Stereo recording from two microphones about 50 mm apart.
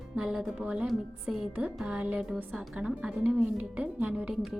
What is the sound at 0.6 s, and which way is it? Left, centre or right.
Speech, right.